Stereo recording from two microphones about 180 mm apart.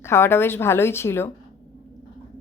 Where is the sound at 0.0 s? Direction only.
15° left (ahead or behind).